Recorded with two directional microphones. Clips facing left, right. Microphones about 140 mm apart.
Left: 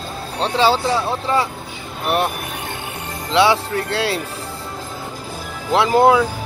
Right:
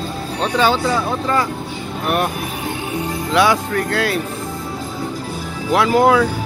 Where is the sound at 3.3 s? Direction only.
25° left (ahead or behind).